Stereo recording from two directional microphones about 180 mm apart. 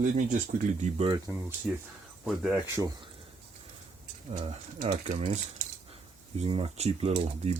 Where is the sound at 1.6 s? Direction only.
10° right (ahead or behind).